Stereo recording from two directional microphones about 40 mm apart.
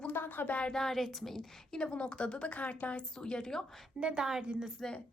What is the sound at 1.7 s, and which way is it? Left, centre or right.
A woman's voice, left.